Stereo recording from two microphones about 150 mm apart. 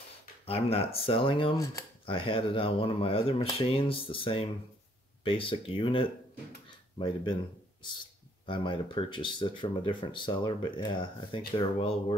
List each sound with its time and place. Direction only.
0.5 s speech: 40° left (ahead or behind)
8.5 s speech: 35° left (ahead or behind)